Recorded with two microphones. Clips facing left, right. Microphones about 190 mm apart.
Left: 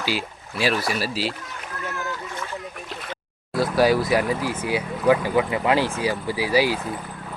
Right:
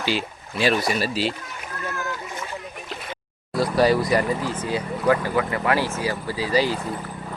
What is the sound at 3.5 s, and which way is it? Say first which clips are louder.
Speech: even; centre (ahead or behind).